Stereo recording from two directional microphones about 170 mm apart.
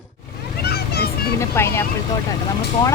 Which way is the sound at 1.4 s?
15° left (ahead or behind).